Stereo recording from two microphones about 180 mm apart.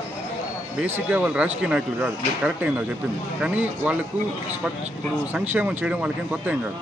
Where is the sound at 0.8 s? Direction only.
10° right (ahead or behind).